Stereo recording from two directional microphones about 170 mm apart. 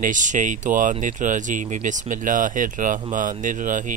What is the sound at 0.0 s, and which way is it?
Speech, 50° right (ahead or behind).